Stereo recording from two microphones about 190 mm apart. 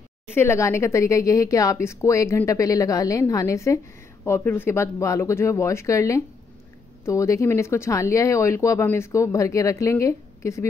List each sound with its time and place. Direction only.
0.3 s speech: 10° left (ahead or behind)